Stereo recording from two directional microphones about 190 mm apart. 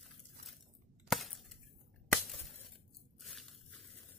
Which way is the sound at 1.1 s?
Centre (ahead or behind).